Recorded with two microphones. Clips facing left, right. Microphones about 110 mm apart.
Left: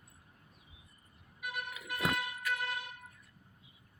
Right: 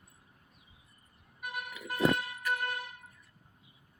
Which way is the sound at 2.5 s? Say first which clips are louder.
Right 4 dB; 45° right (ahead or behind).